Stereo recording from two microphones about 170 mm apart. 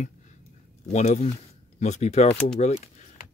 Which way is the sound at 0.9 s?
40° left (ahead or behind).